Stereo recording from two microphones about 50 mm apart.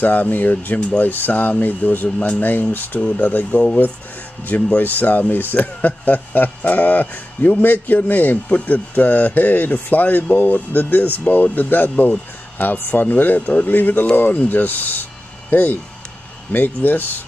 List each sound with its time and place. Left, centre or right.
0.0 s speech: left
3.5 s speech: left